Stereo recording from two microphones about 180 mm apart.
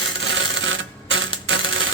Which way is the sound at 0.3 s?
90° right.